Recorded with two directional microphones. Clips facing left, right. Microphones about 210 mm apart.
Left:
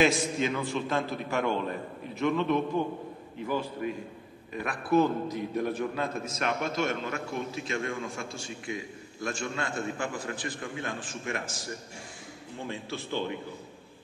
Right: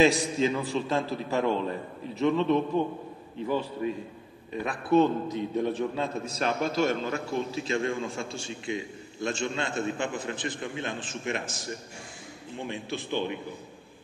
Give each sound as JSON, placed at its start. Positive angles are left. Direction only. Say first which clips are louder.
{"t": 0.0, "sound": "a man's voice", "louder": "right 3 dB", "side_deg": -35}